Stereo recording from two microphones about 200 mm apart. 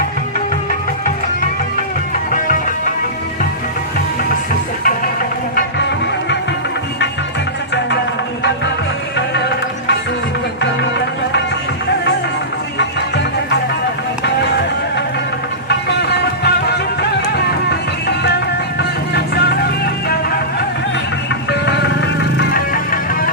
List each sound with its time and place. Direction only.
9.1 s music: 60° left (ahead or behind)
15.9 s music: 55° left (ahead or behind)
18.8 s music: 55° left (ahead or behind)
21.5 s music: 60° left (ahead or behind)
22.5 s music: 45° left (ahead or behind)